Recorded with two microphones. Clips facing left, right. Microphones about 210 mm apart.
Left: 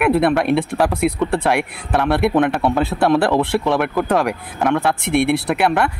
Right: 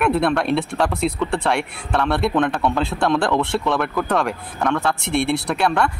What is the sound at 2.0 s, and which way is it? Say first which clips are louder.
Speech: left 4 dB; 20° left (ahead or behind).